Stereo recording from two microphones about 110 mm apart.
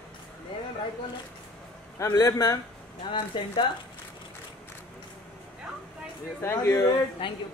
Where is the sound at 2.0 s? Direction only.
30° left (ahead or behind).